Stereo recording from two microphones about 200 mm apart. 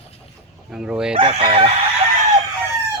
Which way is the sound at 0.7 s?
5° right (ahead or behind).